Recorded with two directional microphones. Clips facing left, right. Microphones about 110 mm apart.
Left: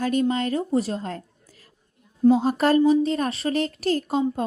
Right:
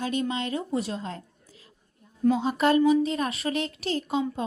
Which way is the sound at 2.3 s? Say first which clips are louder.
Left 4 dB; 40° left (ahead or behind).